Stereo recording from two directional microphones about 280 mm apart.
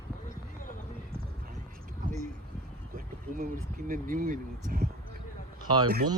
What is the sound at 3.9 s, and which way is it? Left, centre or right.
Speech, right.